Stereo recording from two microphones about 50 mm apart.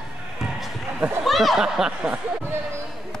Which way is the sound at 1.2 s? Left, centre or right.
Centre.